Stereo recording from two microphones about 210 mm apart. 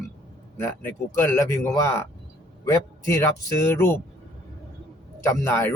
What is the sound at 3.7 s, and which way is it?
Speech, 10° left (ahead or behind).